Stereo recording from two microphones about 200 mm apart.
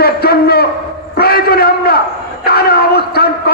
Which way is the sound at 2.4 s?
50° left (ahead or behind).